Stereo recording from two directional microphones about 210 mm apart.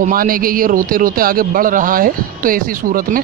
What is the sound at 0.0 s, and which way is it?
A man's voice, 40° right (ahead or behind).